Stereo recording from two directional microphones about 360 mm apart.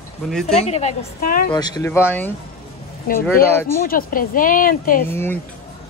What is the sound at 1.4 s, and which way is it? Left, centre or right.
Speech, centre.